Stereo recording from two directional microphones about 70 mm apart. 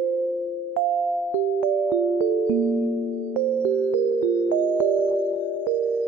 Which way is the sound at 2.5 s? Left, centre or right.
Right.